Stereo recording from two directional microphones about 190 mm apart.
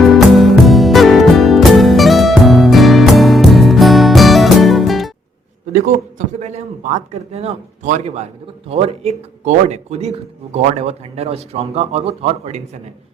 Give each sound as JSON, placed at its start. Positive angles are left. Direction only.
{"t": 0.3, "sound": "music", "side_deg": 0}
{"t": 5.7, "sound": "a man's voice", "side_deg": -40}